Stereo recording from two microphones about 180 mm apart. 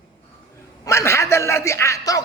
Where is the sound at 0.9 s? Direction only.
15° left (ahead or behind).